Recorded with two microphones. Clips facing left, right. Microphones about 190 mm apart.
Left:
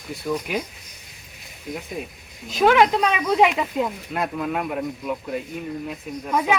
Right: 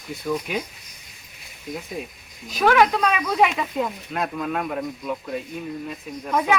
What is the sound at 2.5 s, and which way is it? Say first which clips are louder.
Speech: left 1 dB; 20° left (ahead or behind).